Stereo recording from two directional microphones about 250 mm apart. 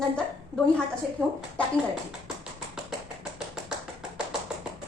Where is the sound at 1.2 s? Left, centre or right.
Centre.